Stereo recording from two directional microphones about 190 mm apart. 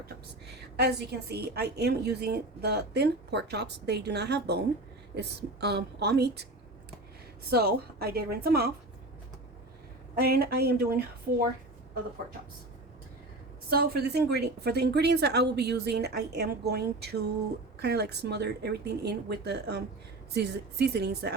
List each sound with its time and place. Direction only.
0.8 s a woman's voice: 60° right (ahead or behind)
7.5 s a woman's voice: 55° right (ahead or behind)
10.2 s a woman's voice: 55° right (ahead or behind)
13.7 s a woman's voice: 55° right (ahead or behind)